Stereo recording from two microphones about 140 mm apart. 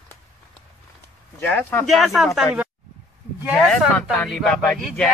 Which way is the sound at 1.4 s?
15° left (ahead or behind).